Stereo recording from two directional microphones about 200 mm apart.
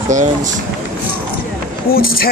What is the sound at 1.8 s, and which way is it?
Speech, 50° left (ahead or behind).